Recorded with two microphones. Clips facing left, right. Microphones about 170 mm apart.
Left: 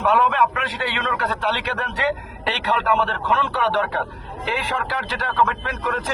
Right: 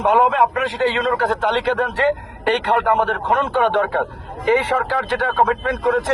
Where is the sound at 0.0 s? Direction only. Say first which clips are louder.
Right 2 dB; 25° right (ahead or behind).